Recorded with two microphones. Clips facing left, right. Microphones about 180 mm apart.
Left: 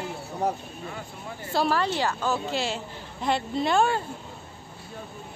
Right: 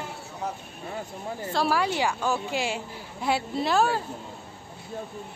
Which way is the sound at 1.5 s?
10° right (ahead or behind).